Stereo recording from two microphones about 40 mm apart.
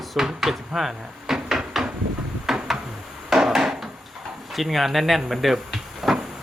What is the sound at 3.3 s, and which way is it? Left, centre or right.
Wood, centre.